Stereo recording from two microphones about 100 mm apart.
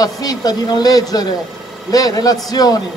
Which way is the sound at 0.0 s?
40° left (ahead or behind).